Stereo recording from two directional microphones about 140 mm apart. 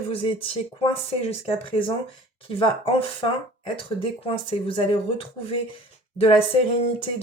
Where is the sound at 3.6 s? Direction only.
40° left (ahead or behind).